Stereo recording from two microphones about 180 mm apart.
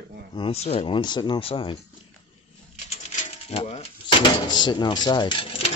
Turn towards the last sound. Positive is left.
turn(degrees=30)  # may be behind; listen again after turning